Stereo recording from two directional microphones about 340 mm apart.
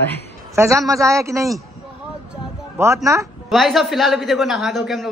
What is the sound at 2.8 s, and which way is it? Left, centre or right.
A man's voice, centre.